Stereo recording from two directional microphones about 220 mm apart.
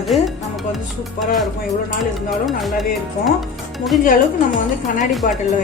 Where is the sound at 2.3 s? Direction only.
Centre (ahead or behind).